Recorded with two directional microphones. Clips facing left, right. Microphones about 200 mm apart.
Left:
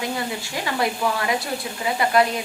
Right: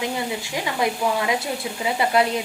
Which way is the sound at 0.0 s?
15° right (ahead or behind).